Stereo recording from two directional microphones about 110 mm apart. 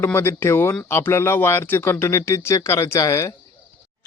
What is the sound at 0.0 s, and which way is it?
Speech, 20° left (ahead or behind).